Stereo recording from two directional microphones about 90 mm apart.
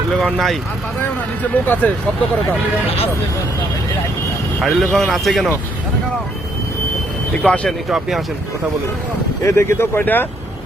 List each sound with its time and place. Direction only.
0.1 s speech: 5° left (ahead or behind)
1.6 s speech: 20° left (ahead or behind)
4.6 s speech: centre (ahead or behind)
7.4 s speech: 15° left (ahead or behind)
7.9 s speech: 5° right (ahead or behind)
9.4 s speech: 30° left (ahead or behind)